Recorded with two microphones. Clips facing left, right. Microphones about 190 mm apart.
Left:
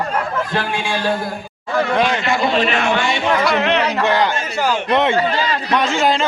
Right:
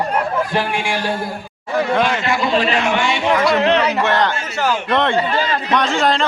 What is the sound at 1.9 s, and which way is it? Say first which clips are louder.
Speech: even; 5° right (ahead or behind).